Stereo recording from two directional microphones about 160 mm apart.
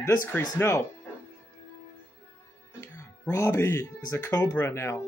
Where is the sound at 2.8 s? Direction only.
20° left (ahead or behind).